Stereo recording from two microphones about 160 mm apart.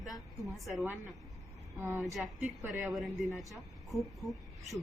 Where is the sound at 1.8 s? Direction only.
15° right (ahead or behind).